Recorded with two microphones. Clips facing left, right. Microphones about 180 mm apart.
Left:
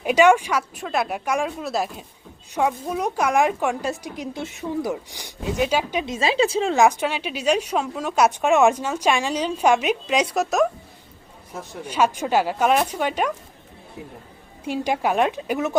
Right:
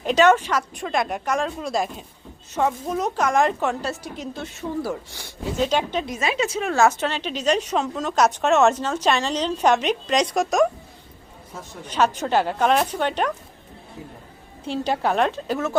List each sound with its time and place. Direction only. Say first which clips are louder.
0.0 s a woman's voice: left 1 dB; 10° left (ahead or behind)
6.1 s a woman's voice: left 4 dB; 30° left (ahead or behind)
6.7 s a woman's voice: right 1 dB; 15° left (ahead or behind)
11.8 s a woman's voice: even; 10° left (ahead or behind)
14.6 s a woman's voice: even; 10° left (ahead or behind)